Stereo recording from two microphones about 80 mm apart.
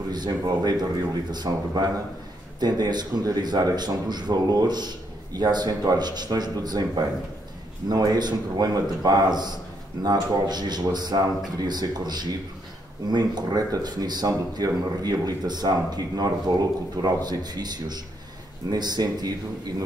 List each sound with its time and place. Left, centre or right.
0.1 s speech: right
7.9 s speech: right
13.5 s speech: right